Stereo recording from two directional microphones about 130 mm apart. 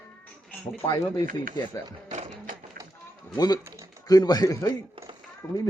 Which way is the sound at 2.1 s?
80° right.